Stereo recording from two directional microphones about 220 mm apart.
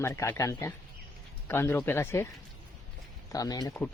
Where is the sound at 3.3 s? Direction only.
15° left (ahead or behind).